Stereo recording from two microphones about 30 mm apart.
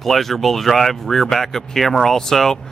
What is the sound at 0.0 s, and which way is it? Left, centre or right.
Speech, centre.